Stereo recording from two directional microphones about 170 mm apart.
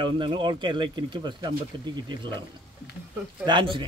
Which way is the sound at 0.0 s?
30° right (ahead or behind).